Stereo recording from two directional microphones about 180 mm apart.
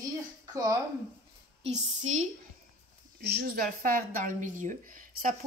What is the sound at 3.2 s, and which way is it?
Speech, 60° right (ahead or behind).